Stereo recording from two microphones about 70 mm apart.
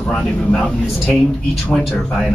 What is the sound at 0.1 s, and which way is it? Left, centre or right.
Speech, centre.